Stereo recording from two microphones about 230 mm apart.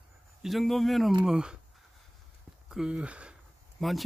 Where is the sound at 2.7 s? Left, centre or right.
Centre.